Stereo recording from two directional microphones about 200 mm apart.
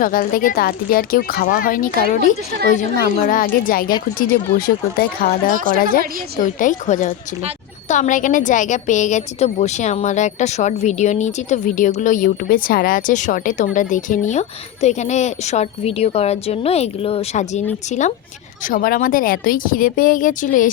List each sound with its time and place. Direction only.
0.0 s speech: 45° left (ahead or behind)
5.5 s a woman's voice: 45° right (ahead or behind)
6.4 s a woman's voice: 40° left (ahead or behind)